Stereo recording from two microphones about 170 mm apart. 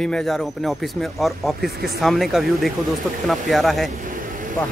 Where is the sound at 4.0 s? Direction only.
55° right (ahead or behind).